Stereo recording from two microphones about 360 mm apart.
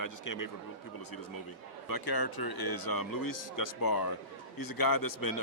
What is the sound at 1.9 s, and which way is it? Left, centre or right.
A man's voice, left.